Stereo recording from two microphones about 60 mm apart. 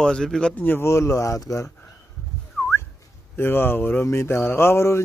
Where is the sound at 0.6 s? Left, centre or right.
Left.